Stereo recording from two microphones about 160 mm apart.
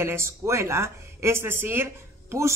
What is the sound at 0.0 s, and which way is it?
A woman's voice, 15° right (ahead or behind).